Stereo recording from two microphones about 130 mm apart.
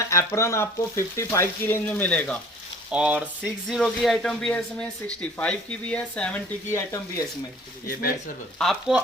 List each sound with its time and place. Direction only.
0.0 s frying: 25° left (ahead or behind)
2.9 s speech: 10° right (ahead or behind); by 6.4 s 10° left (ahead or behind)
6.7 s frying: 20° left (ahead or behind)
8.5 s speech: centre (ahead or behind)